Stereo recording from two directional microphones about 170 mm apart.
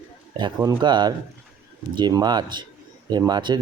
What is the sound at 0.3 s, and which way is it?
Speech, 25° right (ahead or behind).